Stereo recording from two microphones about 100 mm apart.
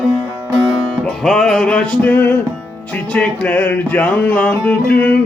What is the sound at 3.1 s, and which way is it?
Music, 15° left (ahead or behind).